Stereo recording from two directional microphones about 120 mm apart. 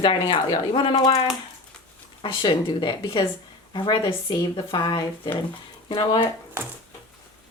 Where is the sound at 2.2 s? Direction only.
45° left (ahead or behind).